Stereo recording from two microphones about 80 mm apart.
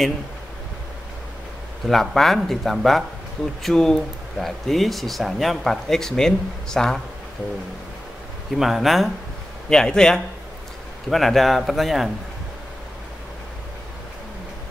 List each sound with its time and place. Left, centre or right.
1.9 s speech: centre
8.5 s a man's voice: centre